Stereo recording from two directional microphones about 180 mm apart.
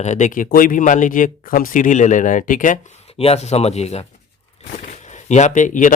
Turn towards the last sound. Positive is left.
turn(degrees=45)  # may be behind; listen again after turning